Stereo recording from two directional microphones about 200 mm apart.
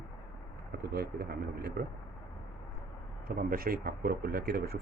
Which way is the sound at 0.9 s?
50° right (ahead or behind).